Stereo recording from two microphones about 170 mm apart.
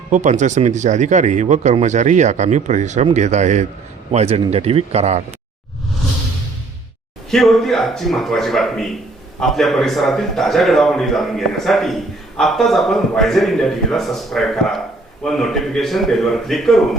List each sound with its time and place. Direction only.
0.1 s a man's voice: 45° right (ahead or behind)
7.3 s a man's voice: centre (ahead or behind)